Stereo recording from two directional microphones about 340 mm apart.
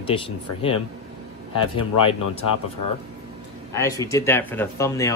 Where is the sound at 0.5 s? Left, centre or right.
Left.